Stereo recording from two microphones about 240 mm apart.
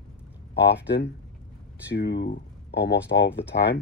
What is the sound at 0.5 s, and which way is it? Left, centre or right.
Speech, left.